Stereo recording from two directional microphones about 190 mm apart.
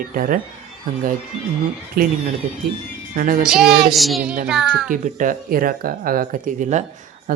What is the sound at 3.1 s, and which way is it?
Speech, 45° right (ahead or behind).